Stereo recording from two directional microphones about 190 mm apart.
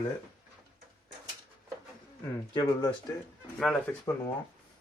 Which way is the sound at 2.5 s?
20° left (ahead or behind).